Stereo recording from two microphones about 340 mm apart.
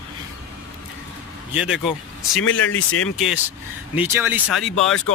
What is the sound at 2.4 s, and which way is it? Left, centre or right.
Speech, left.